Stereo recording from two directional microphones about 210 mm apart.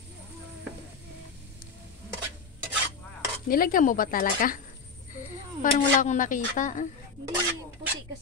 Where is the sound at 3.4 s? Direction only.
40° left (ahead or behind).